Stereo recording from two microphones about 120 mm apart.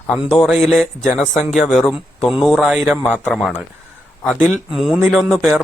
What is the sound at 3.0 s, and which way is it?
Speech, 15° left (ahead or behind).